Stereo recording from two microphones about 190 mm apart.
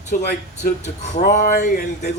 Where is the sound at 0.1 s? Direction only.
50° left (ahead or behind).